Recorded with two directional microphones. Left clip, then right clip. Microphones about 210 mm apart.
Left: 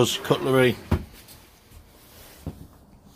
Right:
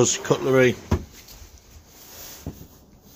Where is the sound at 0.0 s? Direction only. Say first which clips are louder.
Right 1 dB; 5° left (ahead or behind).